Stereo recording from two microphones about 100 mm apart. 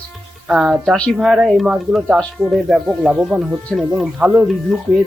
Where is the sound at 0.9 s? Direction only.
10° left (ahead or behind).